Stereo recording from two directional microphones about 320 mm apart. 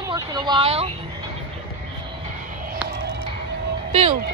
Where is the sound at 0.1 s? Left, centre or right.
Centre.